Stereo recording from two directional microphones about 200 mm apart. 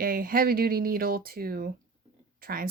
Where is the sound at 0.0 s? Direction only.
45° right (ahead or behind).